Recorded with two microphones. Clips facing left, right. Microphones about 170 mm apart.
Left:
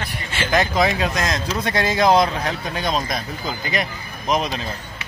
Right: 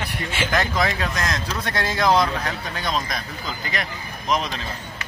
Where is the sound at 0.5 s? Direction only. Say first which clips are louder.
Left 5 dB; 20° left (ahead or behind).